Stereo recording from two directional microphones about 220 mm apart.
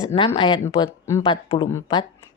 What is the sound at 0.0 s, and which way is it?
A woman's voice, 15° left (ahead or behind).